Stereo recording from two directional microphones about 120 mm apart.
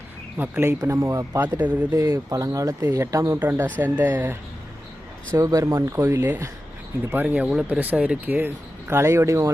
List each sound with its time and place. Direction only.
0.3 s speech: 15° right (ahead or behind)
1.5 s speech: 15° right (ahead or behind)
2.0 s speech: 25° right (ahead or behind)
5.3 s speech: 30° right (ahead or behind)